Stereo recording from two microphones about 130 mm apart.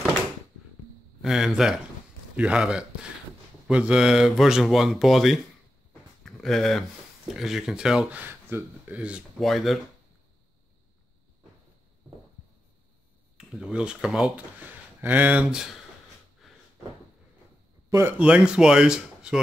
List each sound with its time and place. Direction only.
1.2 s speech: 5° right (ahead or behind)
8.2 s speech: 15° right (ahead or behind)
9.4 s speech: centre (ahead or behind)
13.4 s speech: 5° right (ahead or behind)
16.4 s a sound: centre (ahead or behind)
17.8 s speech: 20° right (ahead or behind)
18.1 s speech: 10° right (ahead or behind)